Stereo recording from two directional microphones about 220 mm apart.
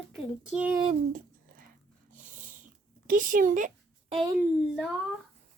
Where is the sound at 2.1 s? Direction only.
35° right (ahead or behind).